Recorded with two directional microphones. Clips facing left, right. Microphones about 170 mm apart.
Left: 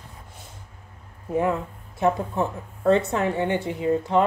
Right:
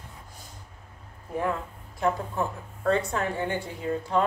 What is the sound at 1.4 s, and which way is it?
Speech, 20° left (ahead or behind).